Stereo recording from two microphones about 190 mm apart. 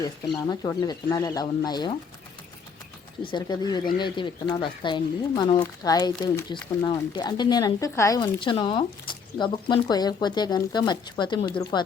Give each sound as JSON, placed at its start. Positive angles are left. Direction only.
{"t": 0.4, "sound": "speech", "side_deg": 20}
{"t": 3.2, "sound": "speech", "side_deg": 20}